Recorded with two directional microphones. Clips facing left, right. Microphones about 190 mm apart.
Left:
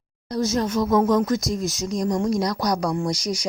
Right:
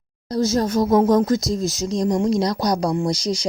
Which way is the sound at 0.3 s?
30° right (ahead or behind).